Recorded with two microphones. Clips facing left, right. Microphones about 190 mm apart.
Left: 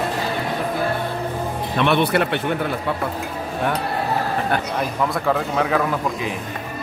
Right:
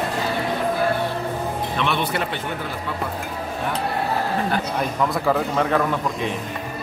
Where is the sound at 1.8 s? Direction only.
60° left (ahead or behind).